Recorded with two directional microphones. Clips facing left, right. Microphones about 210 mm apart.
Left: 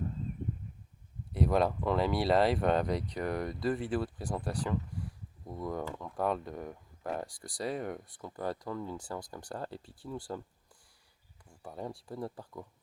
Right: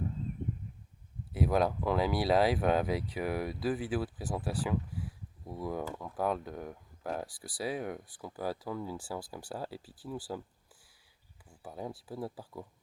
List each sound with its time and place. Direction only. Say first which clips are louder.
1.3 s speech: even; centre (ahead or behind)
11.6 s speech: even; 5° right (ahead or behind)